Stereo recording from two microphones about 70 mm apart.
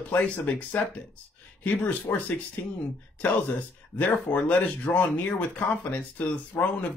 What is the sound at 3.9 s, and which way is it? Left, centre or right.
Speech, left.